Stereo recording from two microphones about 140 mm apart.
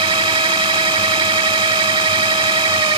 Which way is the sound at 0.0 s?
35° right (ahead or behind).